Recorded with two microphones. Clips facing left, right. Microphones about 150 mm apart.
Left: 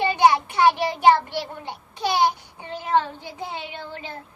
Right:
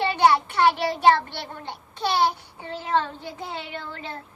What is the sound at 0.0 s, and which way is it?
Child singing, 15° left (ahead or behind).